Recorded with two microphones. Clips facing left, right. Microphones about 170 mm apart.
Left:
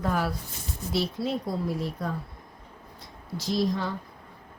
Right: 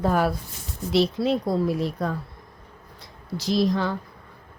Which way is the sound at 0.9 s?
90° right.